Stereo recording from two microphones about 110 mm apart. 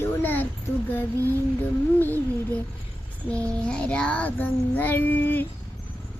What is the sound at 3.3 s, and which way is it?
Child singing, 10° left (ahead or behind).